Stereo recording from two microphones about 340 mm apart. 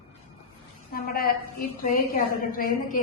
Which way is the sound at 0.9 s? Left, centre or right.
Left.